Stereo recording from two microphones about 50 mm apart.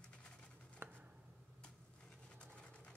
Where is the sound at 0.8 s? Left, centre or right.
Right.